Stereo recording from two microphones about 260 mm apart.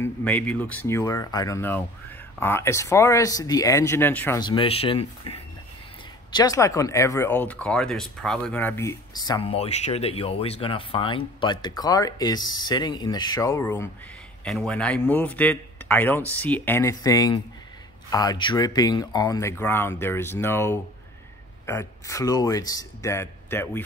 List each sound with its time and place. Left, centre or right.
0.0 s speech: centre